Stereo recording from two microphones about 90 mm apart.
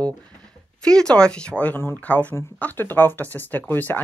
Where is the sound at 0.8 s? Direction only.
10° left (ahead or behind).